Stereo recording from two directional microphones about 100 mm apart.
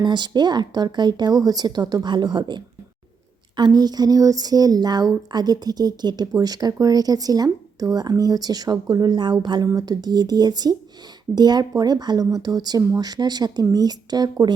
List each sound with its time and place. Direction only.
0.0 s speech: 50° right (ahead or behind)